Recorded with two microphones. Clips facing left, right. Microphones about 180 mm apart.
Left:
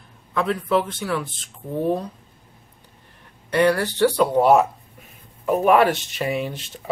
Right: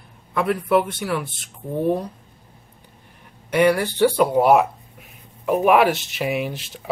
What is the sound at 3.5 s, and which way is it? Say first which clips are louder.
Speech: right 1 dB; 10° right (ahead or behind).